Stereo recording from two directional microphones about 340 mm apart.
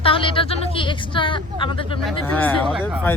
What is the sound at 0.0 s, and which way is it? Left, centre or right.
Speech, centre.